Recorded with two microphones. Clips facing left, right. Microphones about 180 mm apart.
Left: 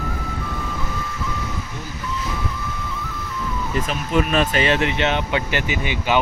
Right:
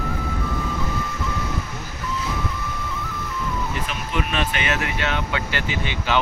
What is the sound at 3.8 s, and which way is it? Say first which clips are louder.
Speech: left 6 dB; 40° left (ahead or behind).